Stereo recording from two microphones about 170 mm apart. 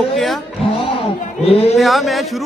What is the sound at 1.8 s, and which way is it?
Speech, centre (ahead or behind).